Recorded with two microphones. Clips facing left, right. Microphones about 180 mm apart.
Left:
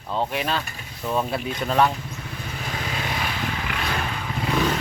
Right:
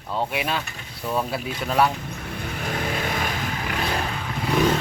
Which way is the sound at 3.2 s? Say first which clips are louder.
Right 1 dB; 40° right (ahead or behind).